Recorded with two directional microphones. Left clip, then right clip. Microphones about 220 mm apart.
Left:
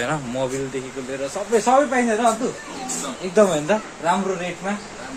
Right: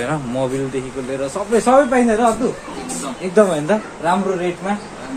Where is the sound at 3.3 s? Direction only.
10° left (ahead or behind).